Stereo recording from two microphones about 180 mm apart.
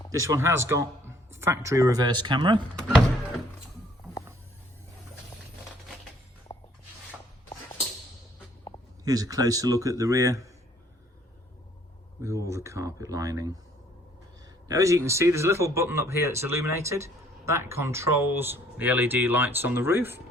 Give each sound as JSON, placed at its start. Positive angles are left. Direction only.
{"t": 0.1, "sound": "speech", "side_deg": -15}
{"t": 6.5, "sound": "a sound", "side_deg": 25}
{"t": 9.0, "sound": "a man's voice", "side_deg": -20}
{"t": 12.2, "sound": "speech", "side_deg": -15}
{"t": 14.7, "sound": "speech", "side_deg": -20}